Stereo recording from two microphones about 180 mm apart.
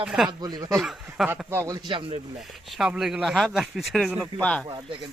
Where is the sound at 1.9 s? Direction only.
30° right (ahead or behind).